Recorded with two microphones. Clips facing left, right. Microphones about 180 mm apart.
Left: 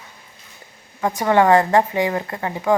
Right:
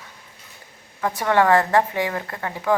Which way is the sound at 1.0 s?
15° left (ahead or behind).